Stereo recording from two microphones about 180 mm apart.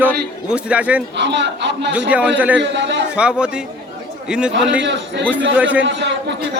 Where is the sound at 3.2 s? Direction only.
5° right (ahead or behind).